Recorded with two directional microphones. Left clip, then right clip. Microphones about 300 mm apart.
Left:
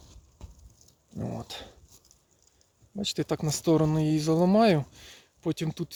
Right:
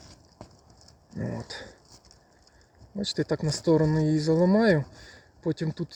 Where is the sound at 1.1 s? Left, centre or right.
Centre.